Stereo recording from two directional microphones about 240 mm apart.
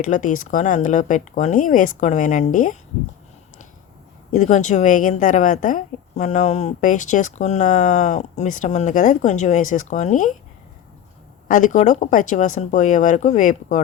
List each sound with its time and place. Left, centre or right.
0.0 s a woman's voice: left
4.3 s a woman's voice: left
11.4 s a woman's voice: left